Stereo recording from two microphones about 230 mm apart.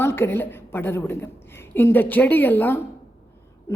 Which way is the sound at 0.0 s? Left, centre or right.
Centre.